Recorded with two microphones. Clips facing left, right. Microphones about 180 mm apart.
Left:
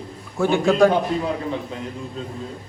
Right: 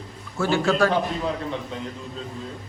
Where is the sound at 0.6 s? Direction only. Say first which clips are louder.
Left 6 dB; 15° left (ahead or behind).